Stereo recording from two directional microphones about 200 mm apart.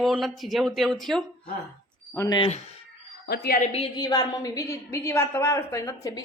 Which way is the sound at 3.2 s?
50° left (ahead or behind).